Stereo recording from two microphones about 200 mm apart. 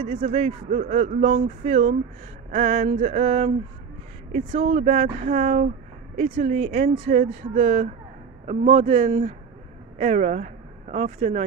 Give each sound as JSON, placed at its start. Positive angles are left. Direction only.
{"t": 0.0, "sound": "speech", "side_deg": -35}